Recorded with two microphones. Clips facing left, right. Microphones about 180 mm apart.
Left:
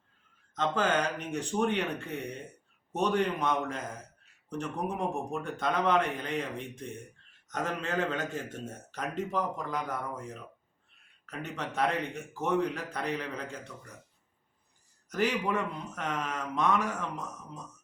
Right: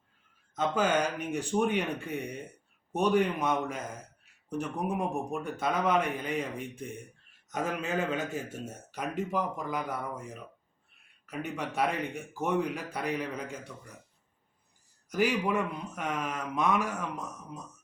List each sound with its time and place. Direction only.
0.5 s a man's voice: 10° right (ahead or behind)
11.3 s a man's voice: 10° right (ahead or behind)
15.1 s a man's voice: 10° right (ahead or behind)